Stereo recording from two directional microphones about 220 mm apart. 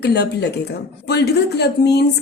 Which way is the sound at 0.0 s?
50° left (ahead or behind).